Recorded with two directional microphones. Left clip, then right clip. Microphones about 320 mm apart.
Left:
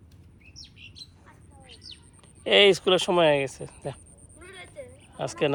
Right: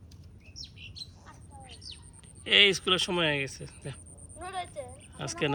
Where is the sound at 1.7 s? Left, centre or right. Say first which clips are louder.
Left 2 dB; right.